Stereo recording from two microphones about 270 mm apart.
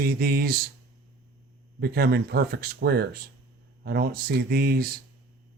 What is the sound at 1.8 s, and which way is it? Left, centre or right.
Speech, right.